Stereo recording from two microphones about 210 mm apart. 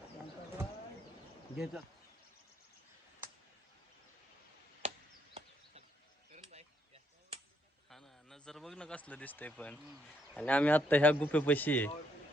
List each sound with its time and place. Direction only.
1.5 s speech: centre (ahead or behind)
6.3 s chop: 30° right (ahead or behind)
7.9 s a man's voice: centre (ahead or behind)